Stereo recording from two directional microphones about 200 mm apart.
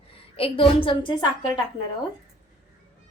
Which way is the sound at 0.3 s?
30° left (ahead or behind).